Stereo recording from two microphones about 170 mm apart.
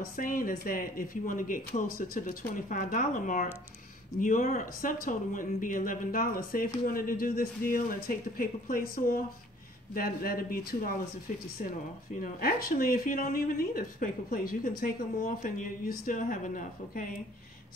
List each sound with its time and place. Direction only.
0.0 s speech: 55° left (ahead or behind)
12.2 s speech: 60° left (ahead or behind)